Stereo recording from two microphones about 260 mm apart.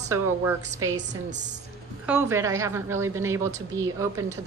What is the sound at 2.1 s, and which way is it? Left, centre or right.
A woman's voice, centre.